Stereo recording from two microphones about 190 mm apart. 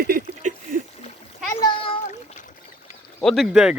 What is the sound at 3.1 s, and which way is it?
Speech, centre (ahead or behind).